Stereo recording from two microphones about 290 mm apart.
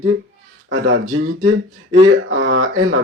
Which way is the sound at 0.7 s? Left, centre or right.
Right.